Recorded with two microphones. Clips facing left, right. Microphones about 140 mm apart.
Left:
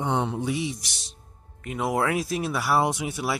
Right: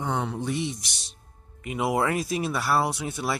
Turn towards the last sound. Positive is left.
turn(degrees=10)  # may be behind; listen again after turning